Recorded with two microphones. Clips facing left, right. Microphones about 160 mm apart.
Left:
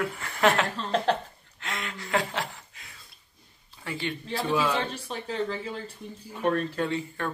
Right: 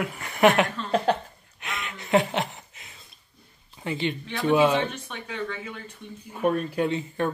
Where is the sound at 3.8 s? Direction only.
20° right (ahead or behind).